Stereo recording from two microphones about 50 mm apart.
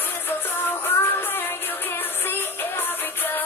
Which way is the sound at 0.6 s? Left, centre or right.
Left.